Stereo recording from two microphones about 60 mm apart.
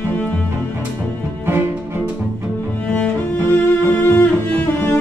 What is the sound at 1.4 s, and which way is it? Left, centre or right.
Music, right.